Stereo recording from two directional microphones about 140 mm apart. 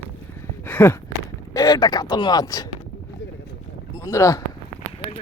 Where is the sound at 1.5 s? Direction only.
25° left (ahead or behind).